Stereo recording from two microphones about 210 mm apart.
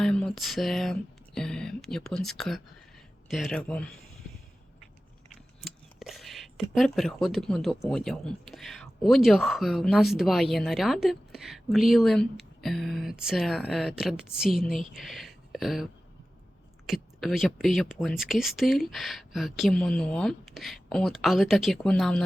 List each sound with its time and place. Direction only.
0.0 s speech: 5° left (ahead or behind)
5.6 s speech: centre (ahead or behind)